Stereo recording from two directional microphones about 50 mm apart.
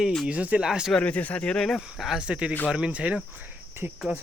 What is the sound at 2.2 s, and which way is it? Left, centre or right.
Speech, right.